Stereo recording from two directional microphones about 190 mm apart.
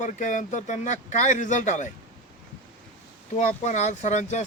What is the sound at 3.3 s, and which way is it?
Speech, 35° left (ahead or behind).